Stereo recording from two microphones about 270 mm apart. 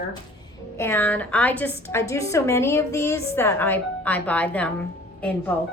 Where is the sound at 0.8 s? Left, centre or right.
Centre.